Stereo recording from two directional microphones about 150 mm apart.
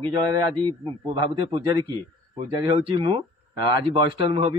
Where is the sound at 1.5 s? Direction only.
30° right (ahead or behind).